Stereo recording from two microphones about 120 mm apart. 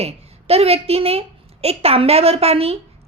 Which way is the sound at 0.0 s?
55° right (ahead or behind).